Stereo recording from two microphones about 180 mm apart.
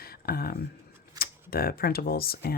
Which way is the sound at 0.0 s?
55° left (ahead or behind).